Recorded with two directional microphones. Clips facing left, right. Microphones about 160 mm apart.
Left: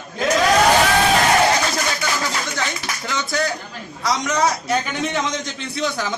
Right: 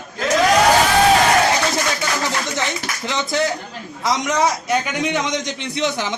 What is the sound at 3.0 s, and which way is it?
A man's voice, 20° right (ahead or behind).